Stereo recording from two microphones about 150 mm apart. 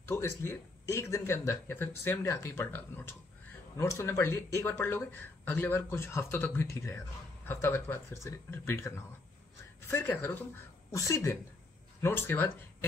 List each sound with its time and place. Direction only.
0.0 s speech: 15° left (ahead or behind)